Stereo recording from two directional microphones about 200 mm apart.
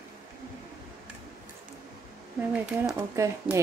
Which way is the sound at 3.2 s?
15° right (ahead or behind).